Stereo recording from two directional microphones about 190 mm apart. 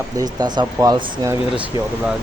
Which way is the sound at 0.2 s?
20° right (ahead or behind).